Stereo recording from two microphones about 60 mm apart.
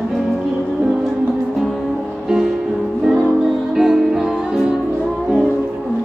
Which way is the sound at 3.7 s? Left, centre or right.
Centre.